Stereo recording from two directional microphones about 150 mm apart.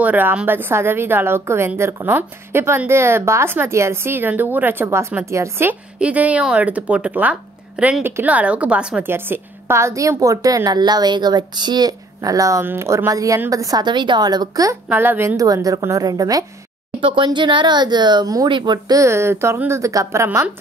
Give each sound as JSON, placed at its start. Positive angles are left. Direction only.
{"t": 0.0, "sound": "a woman's voice", "side_deg": -10}